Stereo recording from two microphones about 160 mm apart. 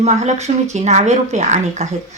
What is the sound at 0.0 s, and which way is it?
Speech, 45° right (ahead or behind).